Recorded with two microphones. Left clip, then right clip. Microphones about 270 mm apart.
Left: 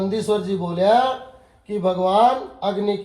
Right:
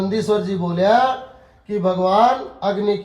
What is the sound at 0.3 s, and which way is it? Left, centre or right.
Speech, right.